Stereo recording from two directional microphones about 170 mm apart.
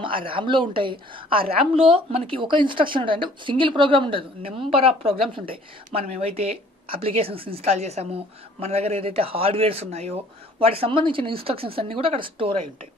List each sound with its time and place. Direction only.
0.0 s a woman's voice: 30° right (ahead or behind)